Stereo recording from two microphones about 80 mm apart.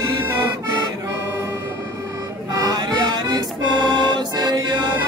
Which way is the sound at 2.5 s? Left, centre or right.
Right.